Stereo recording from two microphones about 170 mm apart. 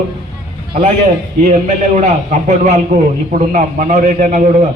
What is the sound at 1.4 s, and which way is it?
A man's voice, 45° right (ahead or behind).